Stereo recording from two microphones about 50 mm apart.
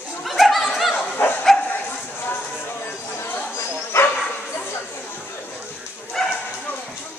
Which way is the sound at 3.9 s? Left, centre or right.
Left.